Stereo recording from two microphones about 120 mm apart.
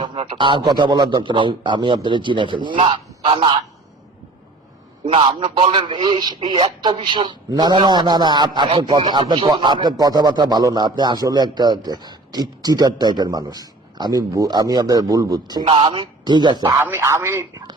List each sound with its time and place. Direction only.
0.0 s a man's voice: 45° right (ahead or behind)
5.0 s a man's voice: 50° right (ahead or behind); by 15.6 s 35° right (ahead or behind)
15.6 s a man's voice: 50° right (ahead or behind)
16.8 s a man's voice: 20° right (ahead or behind)